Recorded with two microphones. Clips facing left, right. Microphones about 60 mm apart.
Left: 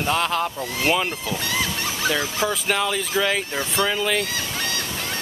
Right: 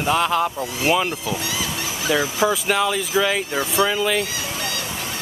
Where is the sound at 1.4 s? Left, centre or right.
Left.